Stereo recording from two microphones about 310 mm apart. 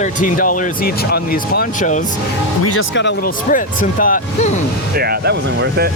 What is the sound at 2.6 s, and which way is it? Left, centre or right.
Speech, left.